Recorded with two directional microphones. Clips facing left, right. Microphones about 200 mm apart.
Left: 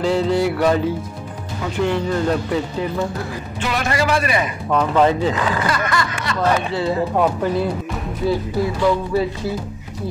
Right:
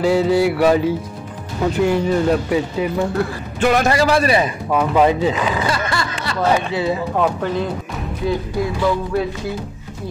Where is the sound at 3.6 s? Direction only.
45° right (ahead or behind).